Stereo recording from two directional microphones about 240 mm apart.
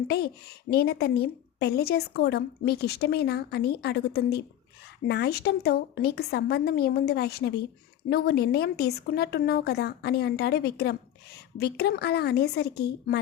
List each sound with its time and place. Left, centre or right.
0.7 s a woman's voice: left